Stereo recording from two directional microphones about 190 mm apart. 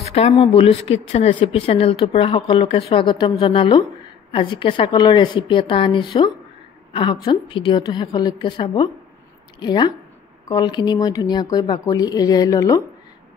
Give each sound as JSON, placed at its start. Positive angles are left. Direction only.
{"t": 0.0, "sound": "speech", "side_deg": 30}